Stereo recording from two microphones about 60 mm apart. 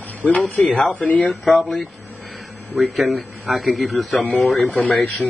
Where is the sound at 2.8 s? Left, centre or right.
Centre.